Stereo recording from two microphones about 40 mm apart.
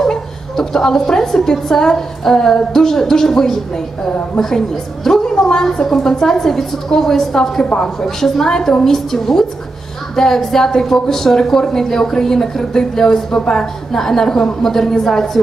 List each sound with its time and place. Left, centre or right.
0.0 s a woman's voice: centre